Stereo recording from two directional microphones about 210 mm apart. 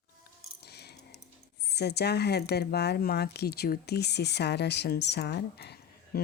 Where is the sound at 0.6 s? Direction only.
50° left (ahead or behind).